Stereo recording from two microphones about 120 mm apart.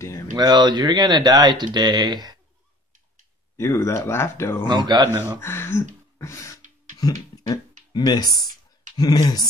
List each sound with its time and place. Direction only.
0.3 s speech: 35° right (ahead or behind)
3.5 s speech: 20° left (ahead or behind)
4.6 s speech: 35° right (ahead or behind)
5.4 s speech: 20° left (ahead or behind)
6.1 s beatboxing: 25° left (ahead or behind)
7.9 s speech: 35° left (ahead or behind)